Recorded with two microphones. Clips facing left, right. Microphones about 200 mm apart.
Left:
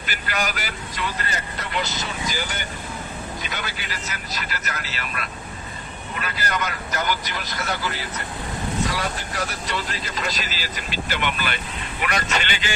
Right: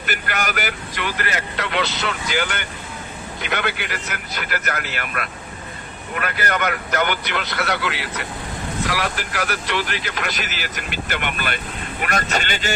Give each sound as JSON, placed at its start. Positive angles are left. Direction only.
{"t": 0.0, "sound": "speech", "side_deg": -55}